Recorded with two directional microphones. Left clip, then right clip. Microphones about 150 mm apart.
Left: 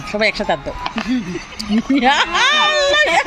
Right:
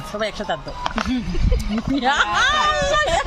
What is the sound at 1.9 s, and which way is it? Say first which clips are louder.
Speech: left 4 dB; 25° left (ahead or behind).